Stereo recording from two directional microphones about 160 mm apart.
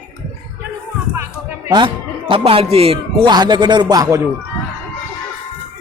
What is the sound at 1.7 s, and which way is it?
Speech, 30° right (ahead or behind).